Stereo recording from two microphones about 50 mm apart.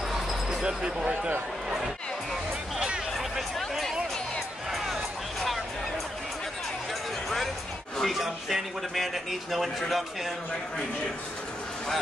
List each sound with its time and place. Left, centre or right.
0.1 s basketball bounce: centre; by 1.3 s right
3.2 s a sound: centre
4.7 s music: centre
8.0 s speech: centre